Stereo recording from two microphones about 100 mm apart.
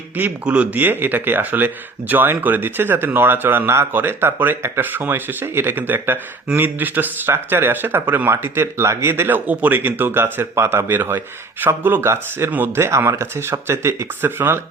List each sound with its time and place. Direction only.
0.2 s speech: 10° right (ahead or behind)